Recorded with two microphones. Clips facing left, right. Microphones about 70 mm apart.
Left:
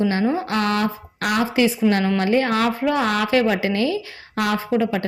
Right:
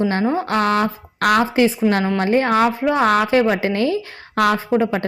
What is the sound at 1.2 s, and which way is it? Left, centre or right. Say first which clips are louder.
Speech: right 6 dB; right.